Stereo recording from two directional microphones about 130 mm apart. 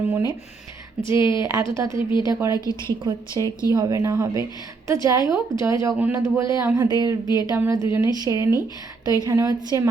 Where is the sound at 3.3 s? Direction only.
25° left (ahead or behind).